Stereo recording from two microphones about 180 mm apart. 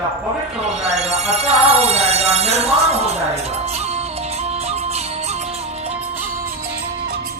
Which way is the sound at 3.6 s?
35° right (ahead or behind).